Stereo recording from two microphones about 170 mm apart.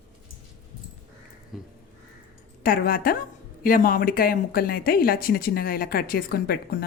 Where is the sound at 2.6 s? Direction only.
60° left (ahead or behind).